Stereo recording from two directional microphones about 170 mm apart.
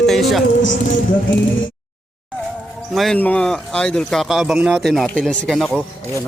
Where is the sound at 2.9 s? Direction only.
Centre (ahead or behind).